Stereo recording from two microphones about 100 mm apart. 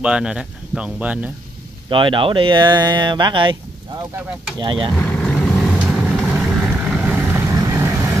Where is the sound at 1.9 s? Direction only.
55° right (ahead or behind).